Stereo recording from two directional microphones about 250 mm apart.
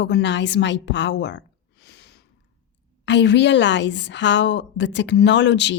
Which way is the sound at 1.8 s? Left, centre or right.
Left.